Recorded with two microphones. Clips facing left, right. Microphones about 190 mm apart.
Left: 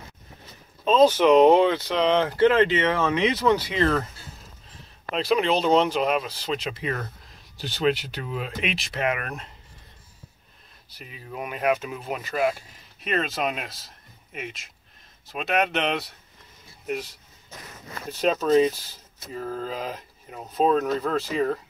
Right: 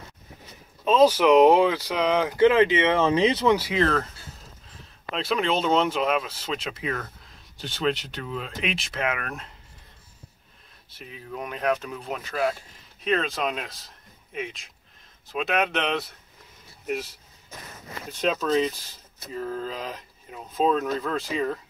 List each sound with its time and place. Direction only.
0.8 s speech: 5° right (ahead or behind); by 3.4 s 30° right (ahead or behind)
3.4 s speech: 5° right (ahead or behind)
5.1 s speech: centre (ahead or behind)
11.0 s speech: 5° left (ahead or behind)
19.3 s speech: 40° left (ahead or behind)